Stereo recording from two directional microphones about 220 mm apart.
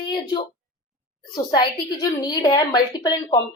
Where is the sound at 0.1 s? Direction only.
20° left (ahead or behind).